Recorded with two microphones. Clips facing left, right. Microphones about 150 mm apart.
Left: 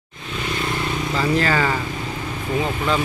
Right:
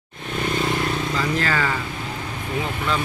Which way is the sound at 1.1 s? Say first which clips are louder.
Left 7 dB; 25° left (ahead or behind).